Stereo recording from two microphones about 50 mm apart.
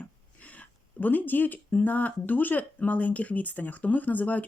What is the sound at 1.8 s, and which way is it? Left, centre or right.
Speech, left.